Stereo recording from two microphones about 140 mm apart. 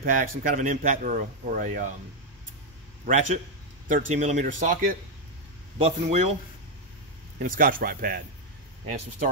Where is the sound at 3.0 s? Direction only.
60° right (ahead or behind).